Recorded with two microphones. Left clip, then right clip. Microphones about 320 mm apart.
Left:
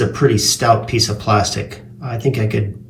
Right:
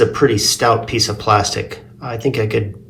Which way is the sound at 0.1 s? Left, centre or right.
Right.